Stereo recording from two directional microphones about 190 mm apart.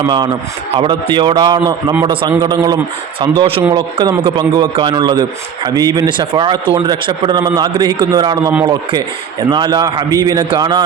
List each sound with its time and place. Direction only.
0.7 s a man's voice: 25° right (ahead or behind)